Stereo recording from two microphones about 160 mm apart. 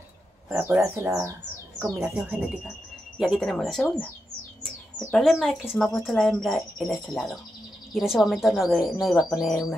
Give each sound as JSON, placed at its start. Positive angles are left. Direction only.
{"t": 0.5, "sound": "speech", "side_deg": -10}
{"t": 2.0, "sound": "speech", "side_deg": -5}
{"t": 5.1, "sound": "speech", "side_deg": 0}